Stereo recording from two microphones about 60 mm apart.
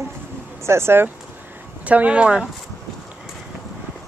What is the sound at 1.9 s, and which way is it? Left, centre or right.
Speech, right.